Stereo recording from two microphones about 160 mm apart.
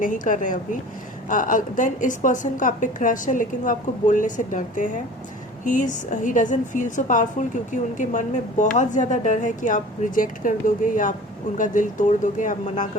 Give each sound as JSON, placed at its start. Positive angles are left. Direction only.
{"t": 0.0, "sound": "a woman's voice", "side_deg": 55}